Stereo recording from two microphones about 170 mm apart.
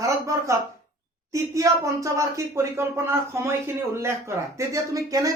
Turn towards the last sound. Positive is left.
turn(degrees=-20)  # may be behind; listen again after turning